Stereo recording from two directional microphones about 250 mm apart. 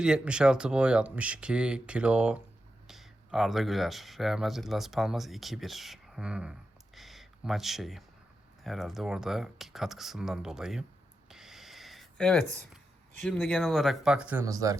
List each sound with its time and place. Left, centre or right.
0.0 s speech: centre
11.3 s a sound: centre
13.2 s speech: centre